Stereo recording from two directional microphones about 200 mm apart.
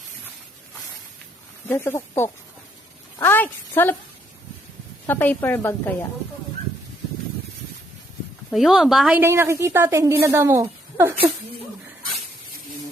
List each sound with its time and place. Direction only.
1.6 s a woman's voice: 10° left (ahead or behind)
5.0 s a woman's voice: 10° left (ahead or behind)
8.4 s a woman's voice: centre (ahead or behind)